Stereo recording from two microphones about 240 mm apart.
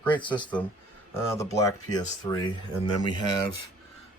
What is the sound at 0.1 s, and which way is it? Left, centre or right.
Speech, centre.